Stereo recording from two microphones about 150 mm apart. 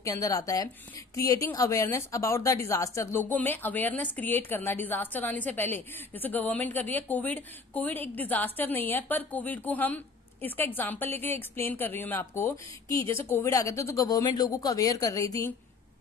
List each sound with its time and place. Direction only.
0.0 s a woman's voice: 20° left (ahead or behind)